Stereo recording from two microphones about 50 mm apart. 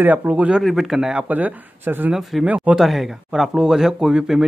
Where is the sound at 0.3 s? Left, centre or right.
Right.